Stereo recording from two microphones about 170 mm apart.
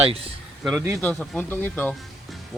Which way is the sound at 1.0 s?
5° left (ahead or behind).